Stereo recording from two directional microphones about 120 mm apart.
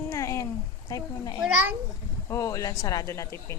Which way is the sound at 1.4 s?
15° right (ahead or behind).